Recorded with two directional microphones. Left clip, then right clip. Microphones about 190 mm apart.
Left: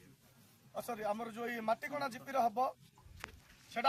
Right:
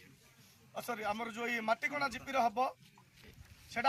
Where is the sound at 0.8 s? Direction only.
15° left (ahead or behind).